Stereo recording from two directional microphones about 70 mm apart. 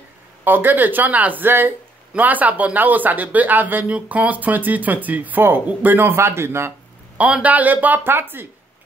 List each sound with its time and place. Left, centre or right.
0.4 s speech: right
7.2 s speech: centre